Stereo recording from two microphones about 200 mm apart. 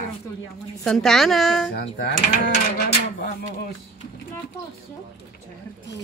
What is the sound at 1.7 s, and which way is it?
Speech, 55° left (ahead or behind).